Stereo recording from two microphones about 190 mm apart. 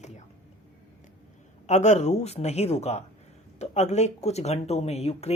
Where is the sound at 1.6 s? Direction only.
40° left (ahead or behind).